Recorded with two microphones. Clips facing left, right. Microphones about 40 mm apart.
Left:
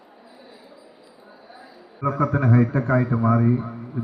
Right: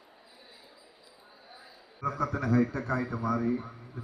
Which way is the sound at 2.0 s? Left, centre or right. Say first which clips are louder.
Left 9 dB; left.